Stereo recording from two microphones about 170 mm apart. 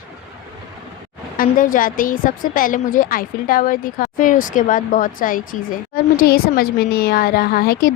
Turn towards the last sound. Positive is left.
turn(degrees=60)  # may be behind; listen again after turning